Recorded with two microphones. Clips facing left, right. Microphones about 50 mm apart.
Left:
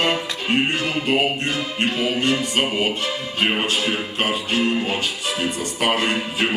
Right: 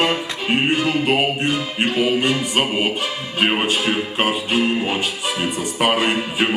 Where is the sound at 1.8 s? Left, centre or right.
Centre.